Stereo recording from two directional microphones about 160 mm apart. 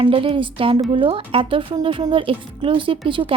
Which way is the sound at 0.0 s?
35° right (ahead or behind).